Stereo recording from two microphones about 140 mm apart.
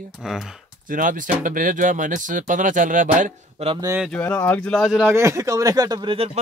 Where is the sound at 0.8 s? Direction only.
75° right (ahead or behind).